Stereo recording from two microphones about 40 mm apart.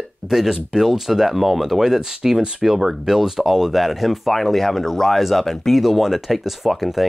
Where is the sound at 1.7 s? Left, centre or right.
Centre.